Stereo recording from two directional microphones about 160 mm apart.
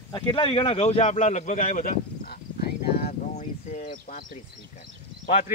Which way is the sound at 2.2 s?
75° left (ahead or behind).